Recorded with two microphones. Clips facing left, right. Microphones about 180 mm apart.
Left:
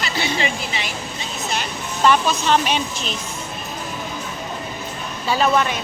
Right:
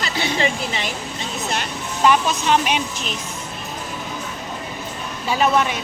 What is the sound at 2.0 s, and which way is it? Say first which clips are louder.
Speech: even; 10° right (ahead or behind).